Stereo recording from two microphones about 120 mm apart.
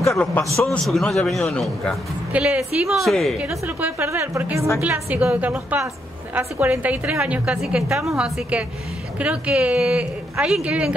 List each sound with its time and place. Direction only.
0.1 s a man's voice: 10° left (ahead or behind)
2.3 s a man's voice: 10° right (ahead or behind)
3.3 s a woman's voice: 10° right (ahead or behind)